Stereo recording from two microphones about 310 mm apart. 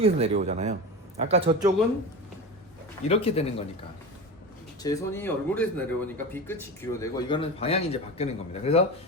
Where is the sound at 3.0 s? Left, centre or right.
Centre.